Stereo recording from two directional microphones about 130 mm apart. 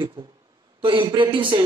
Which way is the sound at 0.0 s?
40° right (ahead or behind).